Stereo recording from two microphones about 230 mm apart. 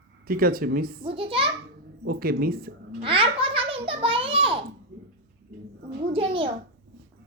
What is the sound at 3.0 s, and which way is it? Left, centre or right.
A child's voice, right.